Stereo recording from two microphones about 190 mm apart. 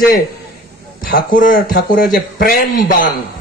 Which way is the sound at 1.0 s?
45° left (ahead or behind).